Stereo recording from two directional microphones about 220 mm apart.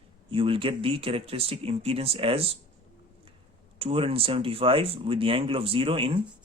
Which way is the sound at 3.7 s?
25° right (ahead or behind).